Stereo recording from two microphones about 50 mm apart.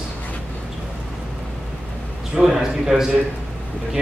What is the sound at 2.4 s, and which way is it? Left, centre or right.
Speech, centre.